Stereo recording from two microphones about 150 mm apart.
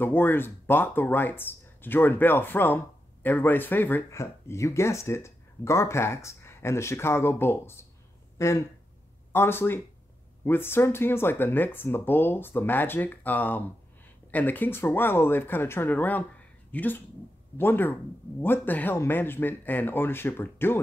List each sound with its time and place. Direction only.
0.0 s speech: 15° left (ahead or behind)